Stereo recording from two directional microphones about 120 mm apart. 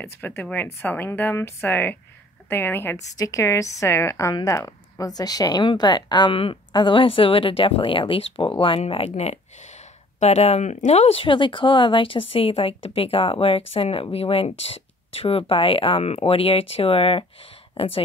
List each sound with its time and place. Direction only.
0.0 s speech: 20° left (ahead or behind); by 18.0 s 50° left (ahead or behind)